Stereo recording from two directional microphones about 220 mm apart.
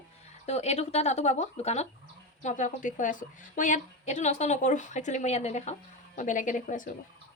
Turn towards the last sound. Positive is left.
turn(degrees=35)  # may be behind; listen again after turning